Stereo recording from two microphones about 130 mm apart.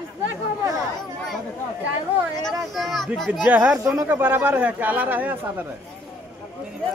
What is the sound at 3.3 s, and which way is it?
Speech, 10° right (ahead or behind).